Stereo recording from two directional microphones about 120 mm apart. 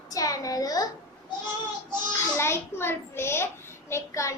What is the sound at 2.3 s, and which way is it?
A child's voice, 20° left (ahead or behind).